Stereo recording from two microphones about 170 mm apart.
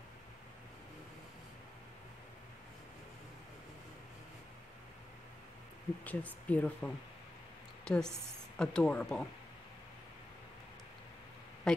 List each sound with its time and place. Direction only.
6.0 s a woman's voice: 10° left (ahead or behind)
11.7 s speech: 5° left (ahead or behind)